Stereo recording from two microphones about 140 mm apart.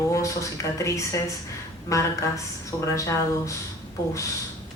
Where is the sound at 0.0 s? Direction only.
20° left (ahead or behind).